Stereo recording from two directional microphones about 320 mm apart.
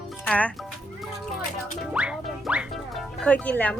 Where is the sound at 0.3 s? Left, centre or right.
Centre.